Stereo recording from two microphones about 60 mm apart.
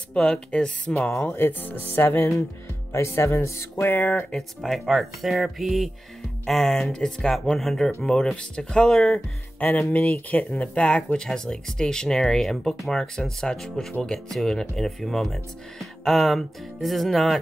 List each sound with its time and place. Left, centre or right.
0.1 s speech: centre
1.3 s speech: left
2.9 s speech: left
3.9 s speech: left
4.6 s speech: centre
9.6 s speech: left; by 17.4 s centre